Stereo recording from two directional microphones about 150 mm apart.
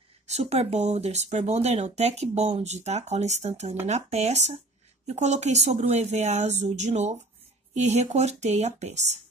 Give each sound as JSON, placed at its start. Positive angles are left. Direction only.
{"t": 0.3, "sound": "speech", "side_deg": -45}